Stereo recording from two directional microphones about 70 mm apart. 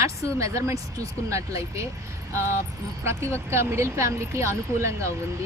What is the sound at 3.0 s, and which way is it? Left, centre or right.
Speech, right.